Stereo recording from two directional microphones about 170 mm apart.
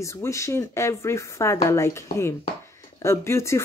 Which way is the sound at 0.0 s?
15° left (ahead or behind).